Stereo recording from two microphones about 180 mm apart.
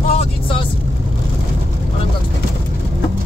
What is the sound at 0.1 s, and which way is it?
Vehicle, 30° left (ahead or behind).